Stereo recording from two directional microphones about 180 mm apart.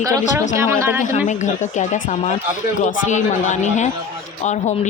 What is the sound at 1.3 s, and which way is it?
Speech, 40° left (ahead or behind).